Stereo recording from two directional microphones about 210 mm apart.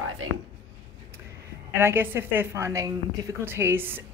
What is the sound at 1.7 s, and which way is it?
A woman's voice, 10° right (ahead or behind).